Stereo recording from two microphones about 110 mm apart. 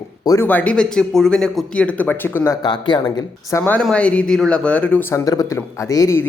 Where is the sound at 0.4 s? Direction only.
15° left (ahead or behind).